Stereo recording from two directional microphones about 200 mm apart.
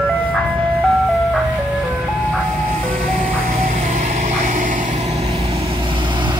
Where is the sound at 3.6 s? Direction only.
35° right (ahead or behind).